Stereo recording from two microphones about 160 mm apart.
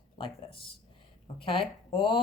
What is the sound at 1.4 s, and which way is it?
Speech, 35° left (ahead or behind).